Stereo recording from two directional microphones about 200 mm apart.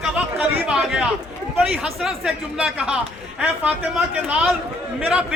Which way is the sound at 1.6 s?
5° right (ahead or behind).